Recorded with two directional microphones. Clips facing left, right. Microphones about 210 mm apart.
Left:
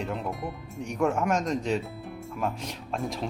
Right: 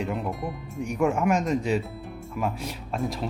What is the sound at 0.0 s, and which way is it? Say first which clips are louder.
Speech: right 3 dB; centre (ahead or behind).